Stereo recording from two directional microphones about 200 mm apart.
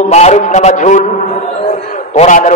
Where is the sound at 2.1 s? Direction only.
35° left (ahead or behind).